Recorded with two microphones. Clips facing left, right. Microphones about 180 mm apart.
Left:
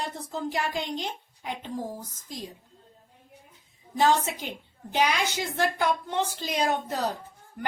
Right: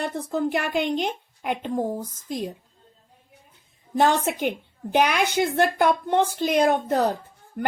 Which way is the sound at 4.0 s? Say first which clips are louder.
Right 3 dB; 60° right (ahead or behind).